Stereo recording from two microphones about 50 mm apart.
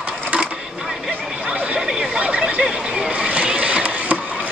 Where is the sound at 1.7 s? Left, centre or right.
Right.